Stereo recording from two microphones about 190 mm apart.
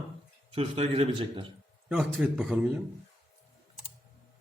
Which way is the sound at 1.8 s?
5° right (ahead or behind).